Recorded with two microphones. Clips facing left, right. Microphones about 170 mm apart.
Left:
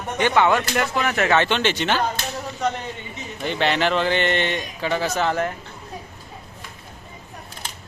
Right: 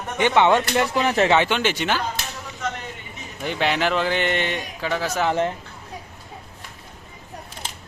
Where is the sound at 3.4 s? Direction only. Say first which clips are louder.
Left 1 dB; 5° right (ahead or behind).